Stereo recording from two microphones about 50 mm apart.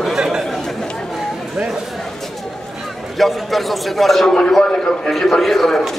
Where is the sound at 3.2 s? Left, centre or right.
Centre.